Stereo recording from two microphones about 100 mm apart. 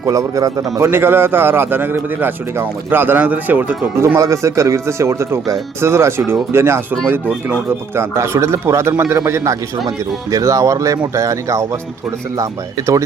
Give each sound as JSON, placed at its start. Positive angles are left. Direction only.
{"t": 0.0, "sound": "speech", "side_deg": -35}
{"t": 0.9, "sound": "a man's voice", "side_deg": -25}
{"t": 4.0, "sound": "a man's voice", "side_deg": -30}